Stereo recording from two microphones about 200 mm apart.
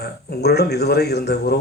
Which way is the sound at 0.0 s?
55° left (ahead or behind).